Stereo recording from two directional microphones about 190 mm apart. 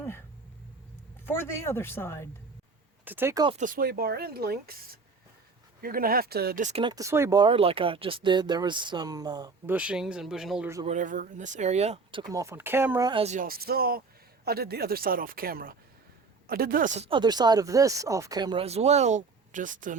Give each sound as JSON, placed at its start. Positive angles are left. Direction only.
{"t": 1.2, "sound": "speech", "side_deg": 10}
{"t": 3.0, "sound": "speech", "side_deg": -10}
{"t": 3.6, "sound": "speech", "side_deg": -45}
{"t": 5.8, "sound": "speech", "side_deg": -50}
{"t": 6.7, "sound": "speech", "side_deg": -30}
{"t": 6.9, "sound": "speech", "side_deg": -15}
{"t": 9.7, "sound": "speech", "side_deg": -5}
{"t": 10.8, "sound": "speech", "side_deg": -40}
{"t": 12.3, "sound": "speech", "side_deg": -15}
{"t": 13.1, "sound": "speech", "side_deg": -30}
{"t": 13.3, "sound": "speech", "side_deg": -50}